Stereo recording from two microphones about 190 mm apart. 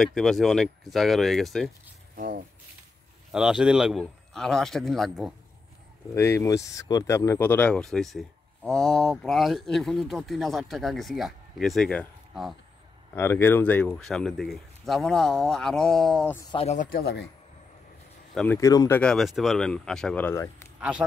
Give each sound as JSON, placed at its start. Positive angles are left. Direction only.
{"t": 0.0, "sound": "speech", "side_deg": 0}
{"t": 2.1, "sound": "speech", "side_deg": -50}
{"t": 3.3, "sound": "speech", "side_deg": -5}
{"t": 6.1, "sound": "speech", "side_deg": 10}
{"t": 13.1, "sound": "speech", "side_deg": 10}
{"t": 16.5, "sound": "speech", "side_deg": 40}
{"t": 18.3, "sound": "speech", "side_deg": 5}
{"t": 18.6, "sound": "speech", "side_deg": 15}
{"t": 18.9, "sound": "speech", "side_deg": 0}